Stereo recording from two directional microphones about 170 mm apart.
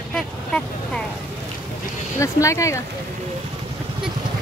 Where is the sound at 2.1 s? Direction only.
15° left (ahead or behind).